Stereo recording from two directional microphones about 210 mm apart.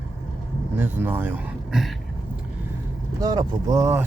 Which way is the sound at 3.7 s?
15° right (ahead or behind).